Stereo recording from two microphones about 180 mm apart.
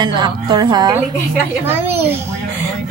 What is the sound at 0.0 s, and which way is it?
Speech, 25° right (ahead or behind).